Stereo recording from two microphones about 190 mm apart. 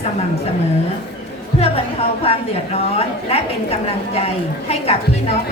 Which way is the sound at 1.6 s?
30° left (ahead or behind).